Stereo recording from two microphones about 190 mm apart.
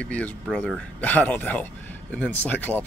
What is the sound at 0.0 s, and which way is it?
Speech, 5° left (ahead or behind).